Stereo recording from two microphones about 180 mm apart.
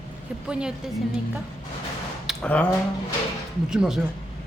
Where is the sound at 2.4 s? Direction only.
5° left (ahead or behind).